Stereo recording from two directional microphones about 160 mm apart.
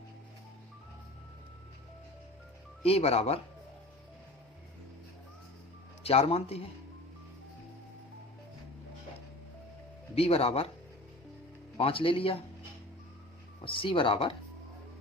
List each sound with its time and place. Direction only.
2.8 s speech: 40° left (ahead or behind)
6.0 s speech: 40° left (ahead or behind)
10.2 s speech: 35° left (ahead or behind)
11.8 s speech: 35° left (ahead or behind)
13.7 s speech: 35° left (ahead or behind)